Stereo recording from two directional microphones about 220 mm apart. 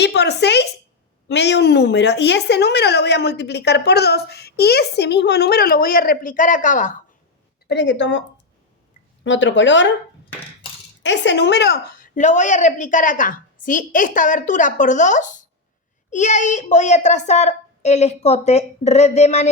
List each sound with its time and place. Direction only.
0.0 s a woman's voice: 50° left (ahead or behind); by 7.0 s 35° left (ahead or behind)
7.7 s speech: 55° left (ahead or behind)
9.2 s speech: 55° left (ahead or behind)
11.0 s a woman's voice: 55° left (ahead or behind); by 19.5 s 30° left (ahead or behind)